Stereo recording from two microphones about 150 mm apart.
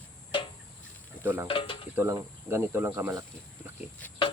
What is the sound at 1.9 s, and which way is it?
Speech, 20° right (ahead or behind).